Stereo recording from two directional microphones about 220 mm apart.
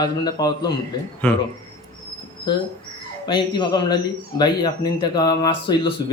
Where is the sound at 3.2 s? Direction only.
20° left (ahead or behind).